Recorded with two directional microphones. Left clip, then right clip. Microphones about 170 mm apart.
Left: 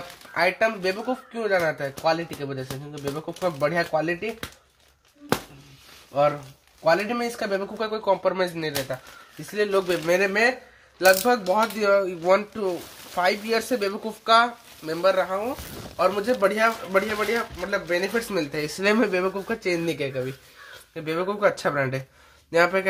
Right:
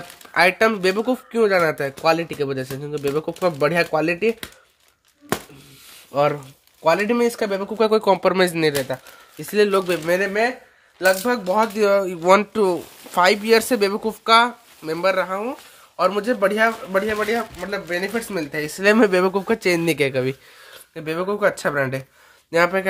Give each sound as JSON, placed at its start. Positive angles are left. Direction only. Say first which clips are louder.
{"t": 0.3, "sound": "speech", "louder": "right 6 dB", "side_deg": -70}
{"t": 6.8, "sound": "speech", "louder": "right 4 dB", "side_deg": -90}
{"t": 9.5, "sound": "speech", "louder": "right 6 dB", "side_deg": -75}
{"t": 10.0, "sound": "speech", "louder": "right 1 dB", "side_deg": -25}
{"t": 18.9, "sound": "speech", "louder": "right 7 dB", "side_deg": -45}
{"t": 20.9, "sound": "speech", "louder": "right 3 dB", "side_deg": -30}